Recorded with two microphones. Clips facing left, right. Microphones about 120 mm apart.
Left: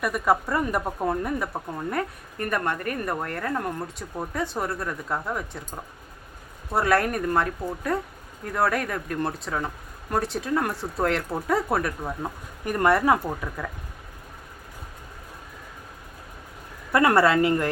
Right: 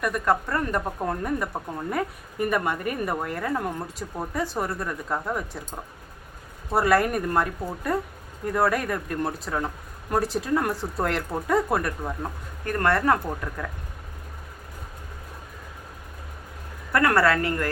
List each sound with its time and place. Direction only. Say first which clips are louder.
0.0 s speech: left 1 dB; 5° left (ahead or behind)
12.6 s speech: left 2 dB; 10° left (ahead or behind)
16.9 s a woman's voice: left 2 dB; 20° left (ahead or behind)